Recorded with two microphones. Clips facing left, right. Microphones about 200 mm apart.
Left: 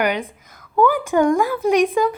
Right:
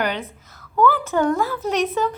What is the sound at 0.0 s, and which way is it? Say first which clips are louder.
A woman's voice: left 4 dB; 10° left (ahead or behind).